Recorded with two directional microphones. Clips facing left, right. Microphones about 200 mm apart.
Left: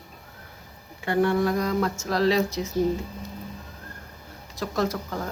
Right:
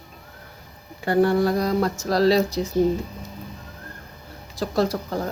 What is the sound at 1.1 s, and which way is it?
Speech, 35° right (ahead or behind).